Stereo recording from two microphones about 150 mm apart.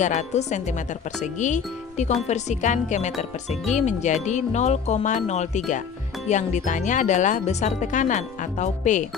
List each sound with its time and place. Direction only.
0.0 s speech: 50° left (ahead or behind)